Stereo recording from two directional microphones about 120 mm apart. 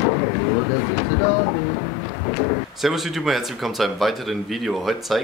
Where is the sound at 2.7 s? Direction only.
Centre (ahead or behind).